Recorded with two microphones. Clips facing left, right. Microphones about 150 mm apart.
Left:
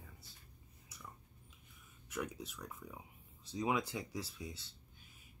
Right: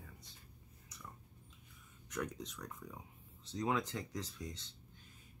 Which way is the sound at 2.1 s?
5° left (ahead or behind).